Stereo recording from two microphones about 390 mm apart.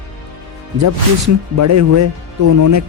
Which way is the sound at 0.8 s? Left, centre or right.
Right.